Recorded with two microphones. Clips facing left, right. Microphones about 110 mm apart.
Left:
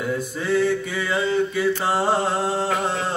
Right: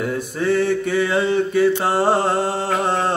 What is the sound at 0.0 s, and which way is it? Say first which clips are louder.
Mantra: right 4 dB; 50° right (ahead or behind).